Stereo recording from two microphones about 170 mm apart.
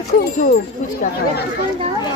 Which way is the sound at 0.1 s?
60° left (ahead or behind).